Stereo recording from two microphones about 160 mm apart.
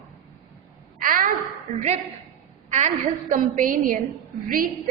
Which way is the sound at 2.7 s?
50° right (ahead or behind).